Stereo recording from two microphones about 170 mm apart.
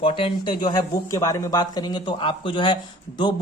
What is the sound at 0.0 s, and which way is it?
Speech, 30° left (ahead or behind).